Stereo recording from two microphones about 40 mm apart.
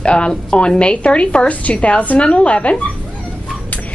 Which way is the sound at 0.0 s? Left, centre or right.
Left.